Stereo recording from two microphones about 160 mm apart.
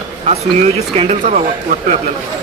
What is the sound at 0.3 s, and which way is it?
Speech, 40° right (ahead or behind).